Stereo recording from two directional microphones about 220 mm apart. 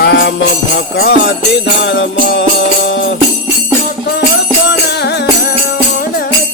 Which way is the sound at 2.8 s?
55° left (ahead or behind).